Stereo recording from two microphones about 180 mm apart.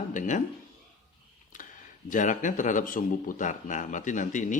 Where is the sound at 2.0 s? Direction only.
45° left (ahead or behind).